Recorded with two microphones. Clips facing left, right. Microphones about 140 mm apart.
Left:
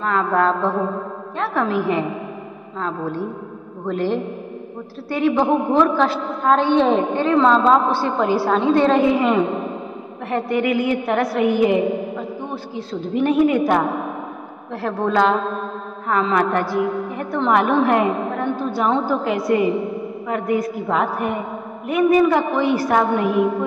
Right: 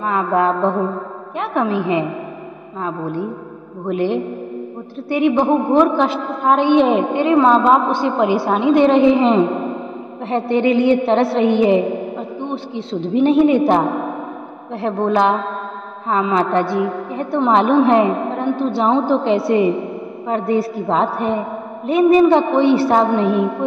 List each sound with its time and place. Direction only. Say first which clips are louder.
0.0 s mantra: right 1 dB; 15° right (ahead or behind)
1.4 s a woman's voice: right 2 dB; 20° right (ahead or behind)
2.8 s mantra: right 2 dB; 15° right (ahead or behind)
5.1 s a woman's voice: right 3 dB; 20° right (ahead or behind)